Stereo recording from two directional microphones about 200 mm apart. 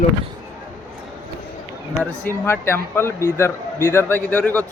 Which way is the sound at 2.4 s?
10° left (ahead or behind).